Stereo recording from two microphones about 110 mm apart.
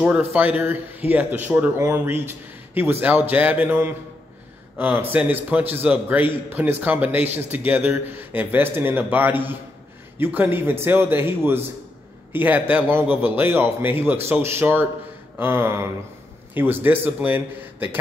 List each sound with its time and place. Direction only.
0.0 s a man's voice: 20° right (ahead or behind)